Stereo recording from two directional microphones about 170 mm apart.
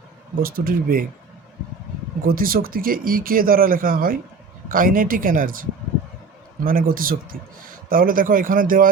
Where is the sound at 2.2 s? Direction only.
60° right (ahead or behind).